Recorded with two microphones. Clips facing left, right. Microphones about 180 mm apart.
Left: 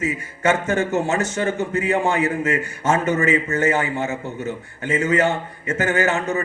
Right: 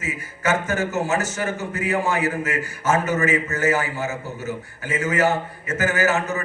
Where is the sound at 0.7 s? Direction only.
30° left (ahead or behind).